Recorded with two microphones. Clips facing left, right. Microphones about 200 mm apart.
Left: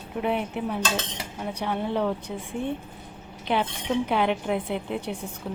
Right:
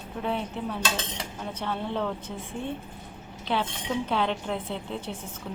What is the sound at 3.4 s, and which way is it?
A woman's voice, 15° left (ahead or behind).